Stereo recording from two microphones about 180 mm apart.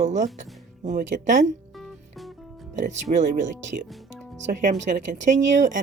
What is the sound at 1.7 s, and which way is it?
Music, centre (ahead or behind).